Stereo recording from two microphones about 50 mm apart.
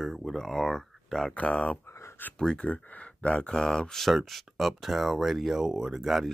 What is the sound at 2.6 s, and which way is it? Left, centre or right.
Speech, left.